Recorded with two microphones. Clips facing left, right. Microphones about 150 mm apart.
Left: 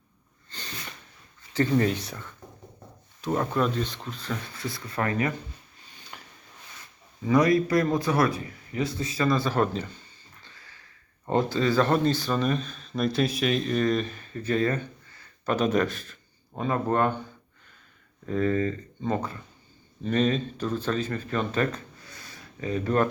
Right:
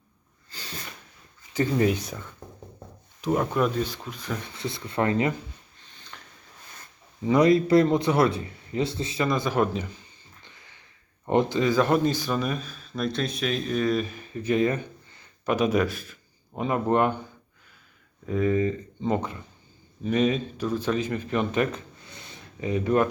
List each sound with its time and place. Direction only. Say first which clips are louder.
0.5 s a sound: even; 10° right (ahead or behind)
1.5 s speech: even; 15° right (ahead or behind)
6.1 s a sound: left 1 dB; 15° left (ahead or behind)
7.3 s a man's voice: right 2 dB; 25° right (ahead or behind)
10.4 s sniff: even; 20° right (ahead or behind)
11.3 s speech: right 2 dB; 20° right (ahead or behind)
18.3 s speech: right 2 dB; 10° right (ahead or behind)